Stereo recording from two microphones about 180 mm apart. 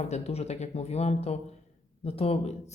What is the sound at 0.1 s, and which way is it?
Speech, 35° left (ahead or behind).